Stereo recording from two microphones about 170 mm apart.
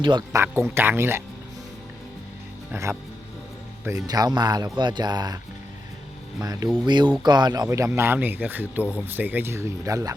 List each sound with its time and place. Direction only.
0.0 s speech: 25° right (ahead or behind)
2.7 s speech: 15° right (ahead or behind)
6.4 s speech: 20° right (ahead or behind)